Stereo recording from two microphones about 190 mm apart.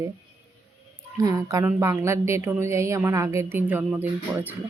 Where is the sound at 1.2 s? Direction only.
20° right (ahead or behind).